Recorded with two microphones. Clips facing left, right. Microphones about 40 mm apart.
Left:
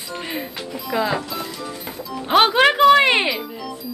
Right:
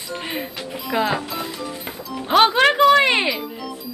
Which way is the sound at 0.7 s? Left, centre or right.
Centre.